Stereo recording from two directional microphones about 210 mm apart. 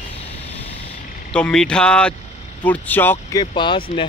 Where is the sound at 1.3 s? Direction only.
5° left (ahead or behind).